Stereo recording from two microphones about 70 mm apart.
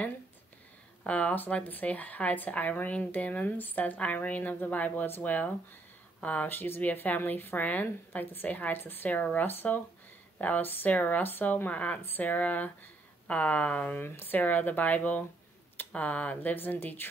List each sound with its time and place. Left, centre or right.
1.0 s speech: centre